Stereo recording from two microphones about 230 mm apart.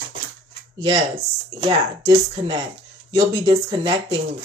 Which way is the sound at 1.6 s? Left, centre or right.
Right.